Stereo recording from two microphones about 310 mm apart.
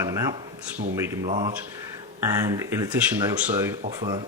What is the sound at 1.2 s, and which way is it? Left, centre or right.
Speech, right.